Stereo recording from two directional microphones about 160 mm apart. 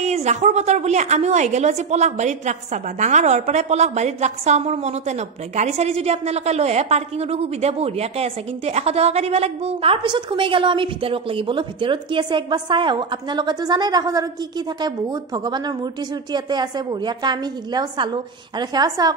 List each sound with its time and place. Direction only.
0.0 s a woman's voice: 45° right (ahead or behind); by 14.2 s 25° right (ahead or behind)
15.3 s a woman's voice: 25° right (ahead or behind)